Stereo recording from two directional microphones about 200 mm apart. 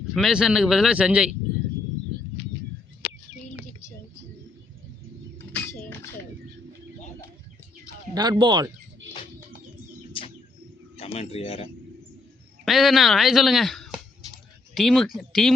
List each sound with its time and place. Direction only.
0.1 s speech: centre (ahead or behind)
5.5 s a sound: 10° left (ahead or behind)
8.1 s speech: 20° right (ahead or behind)
10.9 s speech: 30° left (ahead or behind)
12.6 s speech: centre (ahead or behind)